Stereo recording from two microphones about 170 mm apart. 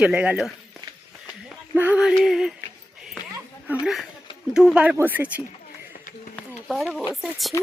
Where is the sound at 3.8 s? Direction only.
Centre (ahead or behind).